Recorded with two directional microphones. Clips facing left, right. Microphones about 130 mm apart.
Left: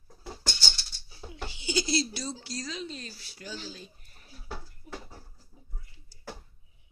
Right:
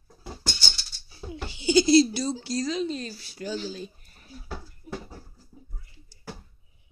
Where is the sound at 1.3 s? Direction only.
30° right (ahead or behind).